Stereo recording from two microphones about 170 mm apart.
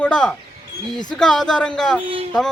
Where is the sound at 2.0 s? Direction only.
35° right (ahead or behind).